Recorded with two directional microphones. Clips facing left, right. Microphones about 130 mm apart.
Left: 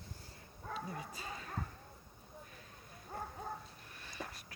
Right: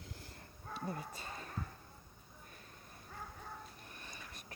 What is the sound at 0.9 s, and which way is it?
Bow-wow, 50° right (ahead or behind).